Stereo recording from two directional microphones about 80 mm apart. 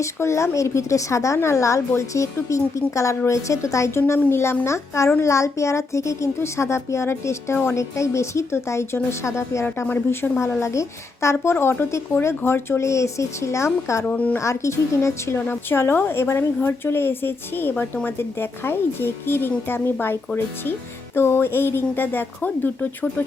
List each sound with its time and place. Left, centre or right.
0.0 s a woman's voice: left
14.1 s speech: centre
14.3 s a woman's voice: left